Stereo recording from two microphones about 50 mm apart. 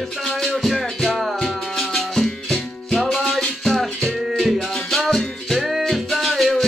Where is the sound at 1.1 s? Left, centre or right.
Centre.